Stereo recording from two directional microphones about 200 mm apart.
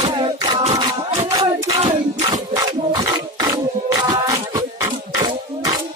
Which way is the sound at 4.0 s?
20° right (ahead or behind).